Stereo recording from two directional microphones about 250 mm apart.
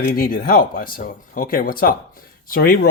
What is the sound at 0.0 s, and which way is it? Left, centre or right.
Speech, left.